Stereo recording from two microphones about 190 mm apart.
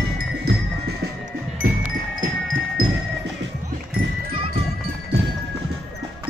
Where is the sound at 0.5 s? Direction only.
60° right (ahead or behind).